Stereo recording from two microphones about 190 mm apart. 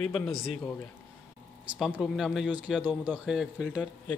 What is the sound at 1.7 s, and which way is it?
Speech, centre (ahead or behind).